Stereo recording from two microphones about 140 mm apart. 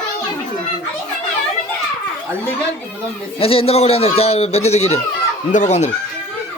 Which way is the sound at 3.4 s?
45° left (ahead or behind).